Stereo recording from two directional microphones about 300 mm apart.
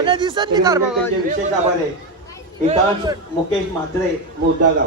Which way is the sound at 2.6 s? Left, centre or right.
Centre.